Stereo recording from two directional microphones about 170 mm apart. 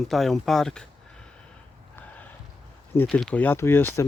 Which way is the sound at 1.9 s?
10° left (ahead or behind).